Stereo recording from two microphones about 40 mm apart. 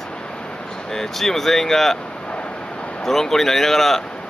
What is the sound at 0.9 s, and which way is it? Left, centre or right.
Speech, centre.